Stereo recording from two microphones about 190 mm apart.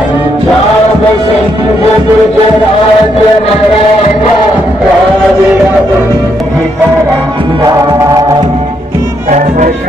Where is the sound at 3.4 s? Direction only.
30° left (ahead or behind).